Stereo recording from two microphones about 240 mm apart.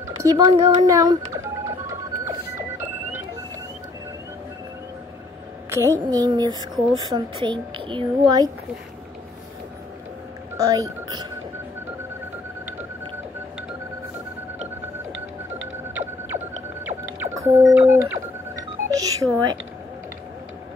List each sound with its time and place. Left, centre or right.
0.2 s telephone dialing: centre
5.7 s speech: centre
10.7 s speech: centre
16.3 s whale vocalization: centre
18.9 s music: centre